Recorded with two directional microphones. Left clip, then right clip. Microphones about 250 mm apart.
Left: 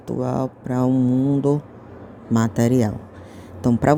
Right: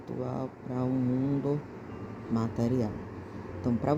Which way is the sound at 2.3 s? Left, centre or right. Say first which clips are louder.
Left 11 dB; left.